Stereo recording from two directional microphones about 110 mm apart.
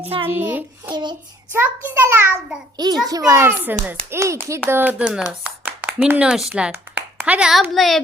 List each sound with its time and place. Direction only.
0.0 s a child's voice: 60° right (ahead or behind)
0.3 s a child's voice: 15° right (ahead or behind)
2.7 s a child's voice: 40° right (ahead or behind); by 8.0 s centre (ahead or behind)